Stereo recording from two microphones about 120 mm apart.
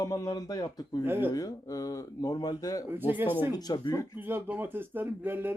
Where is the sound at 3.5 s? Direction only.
35° left (ahead or behind).